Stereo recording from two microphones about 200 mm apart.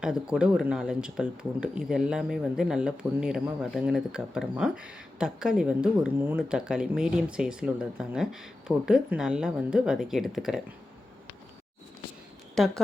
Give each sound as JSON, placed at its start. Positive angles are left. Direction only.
{"t": 0.0, "sound": "speech", "side_deg": -5}
{"t": 12.5, "sound": "speech", "side_deg": 0}